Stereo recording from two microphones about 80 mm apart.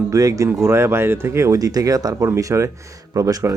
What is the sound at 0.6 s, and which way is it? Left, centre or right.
Speech, right.